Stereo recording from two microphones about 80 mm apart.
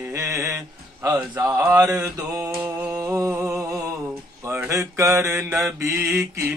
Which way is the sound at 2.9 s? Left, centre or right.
Right.